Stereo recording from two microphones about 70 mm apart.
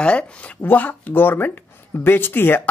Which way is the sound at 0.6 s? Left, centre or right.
Left.